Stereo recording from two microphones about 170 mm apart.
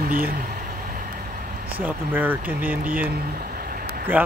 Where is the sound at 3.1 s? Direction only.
65° right (ahead or behind).